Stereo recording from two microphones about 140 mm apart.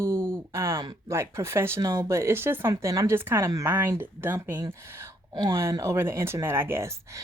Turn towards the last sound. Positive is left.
turn(degrees=-20)  # may be behind; listen again after turning